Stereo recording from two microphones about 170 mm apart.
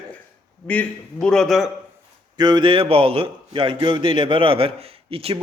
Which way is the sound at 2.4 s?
25° right (ahead or behind).